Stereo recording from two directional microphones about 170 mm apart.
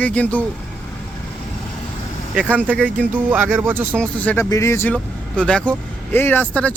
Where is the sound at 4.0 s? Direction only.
10° left (ahead or behind).